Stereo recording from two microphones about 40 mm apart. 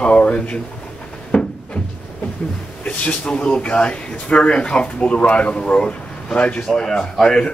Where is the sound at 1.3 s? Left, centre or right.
Left.